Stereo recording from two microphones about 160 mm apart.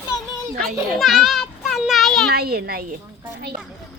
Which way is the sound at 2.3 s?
75° right (ahead or behind).